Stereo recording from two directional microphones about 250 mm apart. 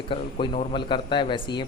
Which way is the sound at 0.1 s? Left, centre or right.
Left.